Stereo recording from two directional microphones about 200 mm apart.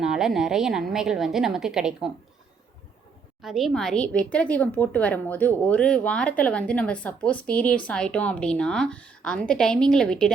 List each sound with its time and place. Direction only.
0.0 s a woman's voice: centre (ahead or behind)
3.4 s a woman's voice: centre (ahead or behind)